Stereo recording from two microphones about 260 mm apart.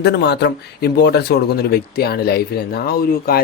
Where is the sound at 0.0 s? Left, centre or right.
Left.